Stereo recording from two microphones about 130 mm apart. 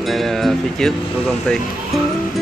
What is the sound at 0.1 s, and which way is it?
Speech, centre (ahead or behind).